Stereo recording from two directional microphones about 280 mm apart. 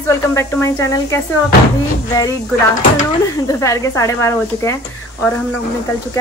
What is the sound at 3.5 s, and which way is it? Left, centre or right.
Speech, centre.